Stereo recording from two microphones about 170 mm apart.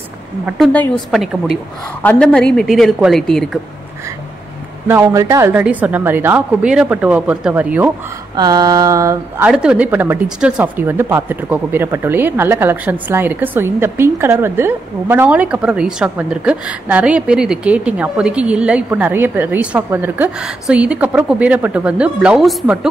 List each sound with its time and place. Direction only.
1.1 s a woman's voice: centre (ahead or behind)
4.8 s speech: 15° right (ahead or behind)
8.4 s a sound: 25° right (ahead or behind)
9.5 s speech: 5° right (ahead or behind)